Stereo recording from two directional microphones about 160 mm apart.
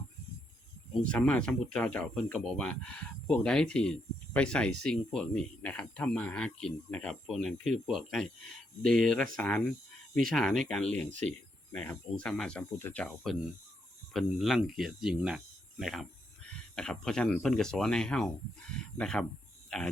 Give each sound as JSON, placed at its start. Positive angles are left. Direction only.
{"t": 1.0, "sound": "speech", "side_deg": 5}
{"t": 11.1, "sound": "speech", "side_deg": -50}
{"t": 11.7, "sound": "speech", "side_deg": 5}